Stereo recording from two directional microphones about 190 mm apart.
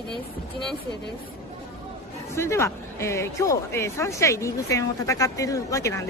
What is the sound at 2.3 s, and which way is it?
Speech, 15° left (ahead or behind).